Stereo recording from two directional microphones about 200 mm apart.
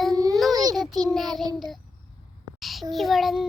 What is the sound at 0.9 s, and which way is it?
Child singing, 20° right (ahead or behind).